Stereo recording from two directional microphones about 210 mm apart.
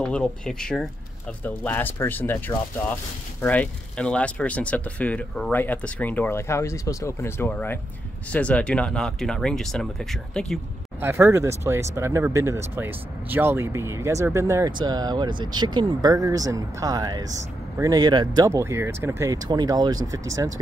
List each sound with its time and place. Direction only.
0.0 s speech: 5° left (ahead or behind)
11.0 s speech: 10° right (ahead or behind)